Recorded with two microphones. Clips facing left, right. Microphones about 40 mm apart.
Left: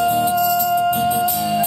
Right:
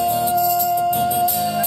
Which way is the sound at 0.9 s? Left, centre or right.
Left.